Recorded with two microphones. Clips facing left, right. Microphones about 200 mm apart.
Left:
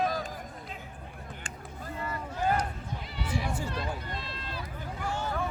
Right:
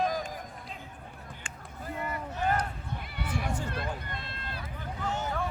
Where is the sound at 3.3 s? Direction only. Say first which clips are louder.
Left 1 dB; 10° left (ahead or behind).